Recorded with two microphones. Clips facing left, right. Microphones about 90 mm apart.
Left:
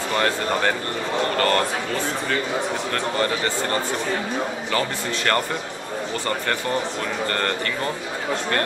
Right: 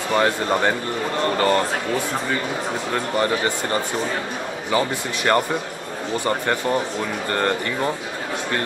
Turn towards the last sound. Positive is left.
turn(degrees=-15)  # may be behind; listen again after turning